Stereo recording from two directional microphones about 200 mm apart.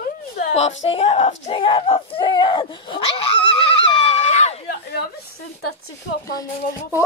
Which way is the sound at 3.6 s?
30° left (ahead or behind).